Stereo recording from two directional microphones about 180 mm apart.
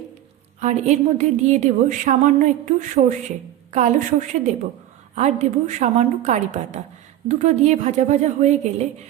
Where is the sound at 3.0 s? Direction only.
55° right (ahead or behind).